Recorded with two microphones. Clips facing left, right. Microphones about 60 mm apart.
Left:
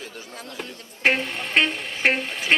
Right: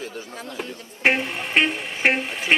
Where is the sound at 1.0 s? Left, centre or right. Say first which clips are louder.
Right 1 dB; centre.